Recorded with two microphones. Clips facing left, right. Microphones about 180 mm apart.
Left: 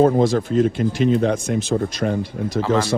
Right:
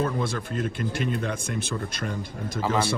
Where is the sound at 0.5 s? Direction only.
50° right (ahead or behind).